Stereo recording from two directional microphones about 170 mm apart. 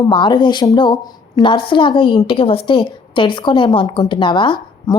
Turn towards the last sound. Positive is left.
turn(degrees=25)  # may be behind; listen again after turning